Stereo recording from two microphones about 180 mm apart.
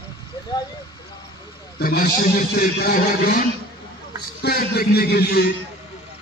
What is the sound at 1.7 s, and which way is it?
A man's voice, 55° left (ahead or behind).